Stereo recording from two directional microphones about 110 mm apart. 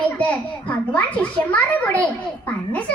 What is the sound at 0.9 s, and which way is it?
A child's voice, 15° left (ahead or behind).